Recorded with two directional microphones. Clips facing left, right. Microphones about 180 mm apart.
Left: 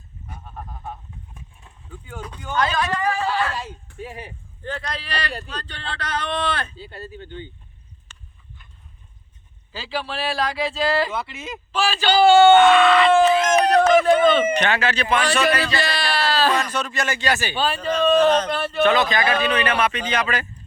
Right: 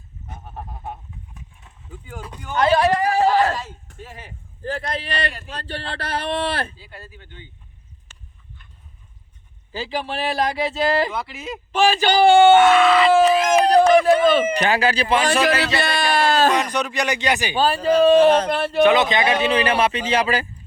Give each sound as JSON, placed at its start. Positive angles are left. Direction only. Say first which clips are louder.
{"t": 1.9, "sound": "speech", "louder": "even", "side_deg": -5}
{"t": 2.6, "sound": "a sound", "louder": "right 6 dB", "side_deg": -30}
{"t": 3.6, "sound": "a sound", "louder": "left 3 dB", "side_deg": 10}
{"t": 4.6, "sound": "speech", "louder": "right 4 dB", "side_deg": -30}
{"t": 6.7, "sound": "speech", "louder": "left 6 dB", "side_deg": 30}
{"t": 9.7, "sound": "speech", "louder": "right 2 dB", "side_deg": -20}
{"t": 11.1, "sound": "speech", "louder": "right 1 dB", "side_deg": 0}
{"t": 11.8, "sound": "speech", "louder": "right 2 dB", "side_deg": -15}
{"t": 14.5, "sound": "speech", "louder": "right 2 dB", "side_deg": -35}
{"t": 15.4, "sound": "speech", "louder": "right 1 dB", "side_deg": -80}
{"t": 16.0, "sound": "a sound", "louder": "right 6 dB", "side_deg": -50}
{"t": 16.6, "sound": "speech", "louder": "right 2 dB", "side_deg": -15}
{"t": 17.6, "sound": "speech", "louder": "right 7 dB", "side_deg": -35}
{"t": 18.8, "sound": "speech", "louder": "right 3 dB", "side_deg": -20}